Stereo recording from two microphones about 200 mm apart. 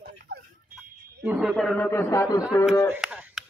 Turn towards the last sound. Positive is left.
turn(degrees=-5)  # may be behind; listen again after turning